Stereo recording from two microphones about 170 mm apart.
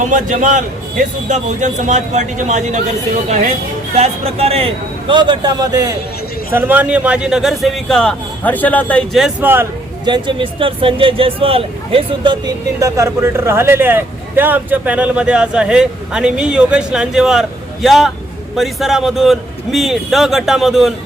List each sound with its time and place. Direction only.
0.1 s a man's voice: 45° right (ahead or behind); by 5.8 s 25° right (ahead or behind)
6.5 s a man's voice: 10° right (ahead or behind)
10.1 s a man's voice: 30° right (ahead or behind); by 20.9 s centre (ahead or behind)